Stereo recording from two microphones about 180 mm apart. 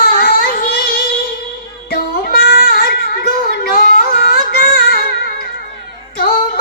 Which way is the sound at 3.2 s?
55° left (ahead or behind).